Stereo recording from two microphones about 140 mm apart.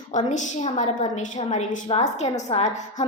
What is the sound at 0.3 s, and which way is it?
A woman's voice, 60° left (ahead or behind).